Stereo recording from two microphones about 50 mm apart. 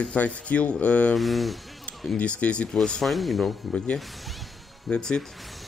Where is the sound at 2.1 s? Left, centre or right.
Left.